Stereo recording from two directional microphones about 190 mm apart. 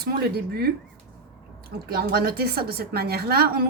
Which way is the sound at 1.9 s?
55° right (ahead or behind).